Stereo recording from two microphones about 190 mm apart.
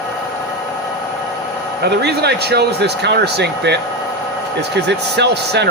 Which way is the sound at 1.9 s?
60° right (ahead or behind).